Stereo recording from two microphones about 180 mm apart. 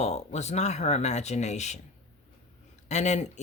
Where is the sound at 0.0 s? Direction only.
40° left (ahead or behind).